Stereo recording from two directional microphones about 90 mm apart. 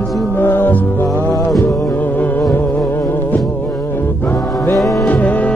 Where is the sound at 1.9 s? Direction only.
20° left (ahead or behind).